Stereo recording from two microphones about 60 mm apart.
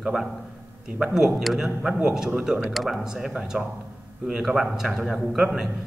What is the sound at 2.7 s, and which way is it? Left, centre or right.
A man's voice, centre.